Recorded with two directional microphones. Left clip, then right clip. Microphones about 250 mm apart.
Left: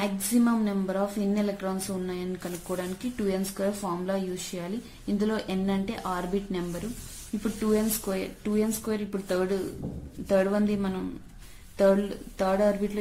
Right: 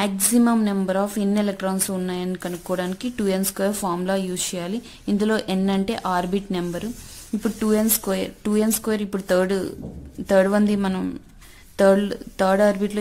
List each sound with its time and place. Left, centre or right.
0.0 s a woman's voice: right